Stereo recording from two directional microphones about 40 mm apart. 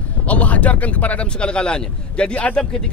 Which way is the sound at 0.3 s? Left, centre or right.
Left.